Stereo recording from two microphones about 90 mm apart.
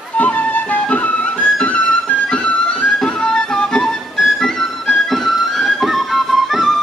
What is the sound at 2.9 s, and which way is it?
Music, 5° left (ahead or behind).